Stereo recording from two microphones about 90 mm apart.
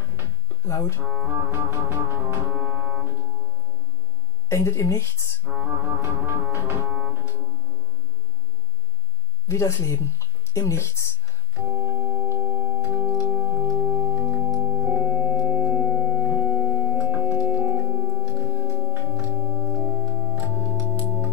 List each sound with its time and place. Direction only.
0.7 s speech: 35° left (ahead or behind)
1.1 s music: 25° right (ahead or behind)
4.5 s speech: 30° left (ahead or behind)
5.4 s music: 25° right (ahead or behind)
9.5 s speech: 30° left (ahead or behind)
11.5 s organ: 35° right (ahead or behind)
15.1 s music: 20° right (ahead or behind)
16.7 s organ: 25° right (ahead or behind)
18.2 s organ: 25° right (ahead or behind)